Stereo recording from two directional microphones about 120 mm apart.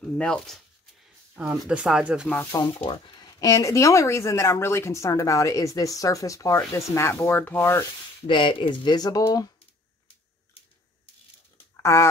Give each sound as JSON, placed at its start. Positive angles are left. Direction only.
{"t": 0.0, "sound": "speech", "side_deg": 5}
{"t": 1.3, "sound": "speech", "side_deg": -15}
{"t": 2.8, "sound": "speech", "side_deg": 40}
{"t": 8.3, "sound": "speech", "side_deg": 45}
{"t": 11.7, "sound": "speech", "side_deg": 20}